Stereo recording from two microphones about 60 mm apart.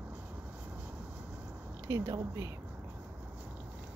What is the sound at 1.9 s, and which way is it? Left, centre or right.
Speech, right.